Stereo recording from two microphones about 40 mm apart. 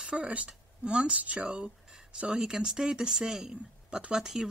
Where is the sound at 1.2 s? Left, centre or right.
Right.